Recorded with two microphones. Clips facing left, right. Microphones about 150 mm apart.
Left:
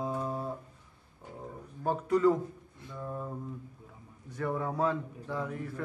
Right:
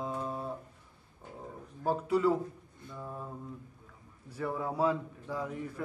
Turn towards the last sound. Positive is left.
turn(degrees=-10)  # may be behind; listen again after turning